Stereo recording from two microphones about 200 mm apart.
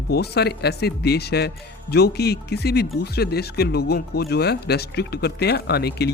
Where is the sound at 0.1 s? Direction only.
55° left (ahead or behind).